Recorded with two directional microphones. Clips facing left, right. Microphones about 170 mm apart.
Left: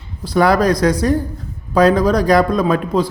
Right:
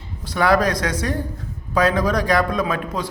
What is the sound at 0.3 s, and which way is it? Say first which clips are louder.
A man's voice: left 5 dB; 35° left (ahead or behind).